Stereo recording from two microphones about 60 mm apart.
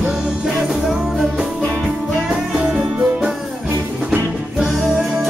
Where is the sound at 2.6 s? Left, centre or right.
Centre.